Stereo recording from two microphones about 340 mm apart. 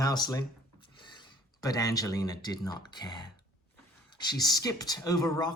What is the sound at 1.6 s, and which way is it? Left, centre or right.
Speech, centre.